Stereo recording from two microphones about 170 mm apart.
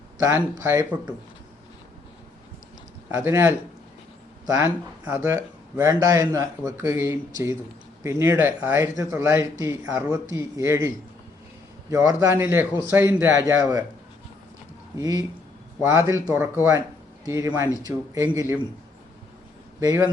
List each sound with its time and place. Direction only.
0.2 s speech: 15° right (ahead or behind)
3.1 s speech: 15° right (ahead or behind)
14.9 s speech: 20° right (ahead or behind)